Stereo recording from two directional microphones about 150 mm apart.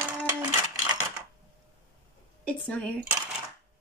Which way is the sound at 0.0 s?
25° right (ahead or behind).